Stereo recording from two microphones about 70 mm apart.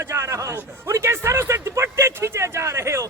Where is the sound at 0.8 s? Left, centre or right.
Right.